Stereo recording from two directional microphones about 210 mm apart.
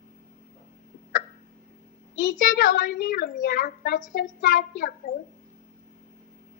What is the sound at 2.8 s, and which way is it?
Speech, 50° left (ahead or behind).